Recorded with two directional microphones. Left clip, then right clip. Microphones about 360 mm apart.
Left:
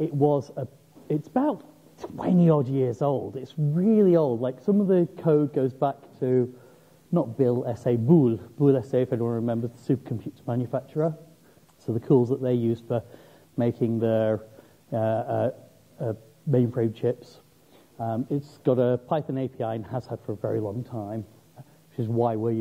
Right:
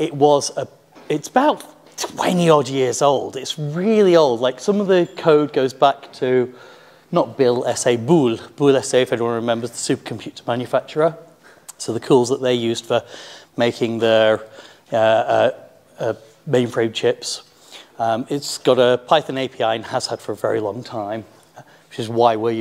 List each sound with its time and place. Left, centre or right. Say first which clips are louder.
0.3 s speech: right 10 dB; centre
3.1 s speech: right 10 dB; right
3.3 s speech: right 6 dB; centre
7.6 s speech: right 8 dB; centre
22.2 s speech: right 10 dB; centre